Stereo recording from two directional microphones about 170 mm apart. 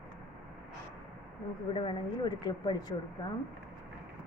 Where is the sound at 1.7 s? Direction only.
30° left (ahead or behind).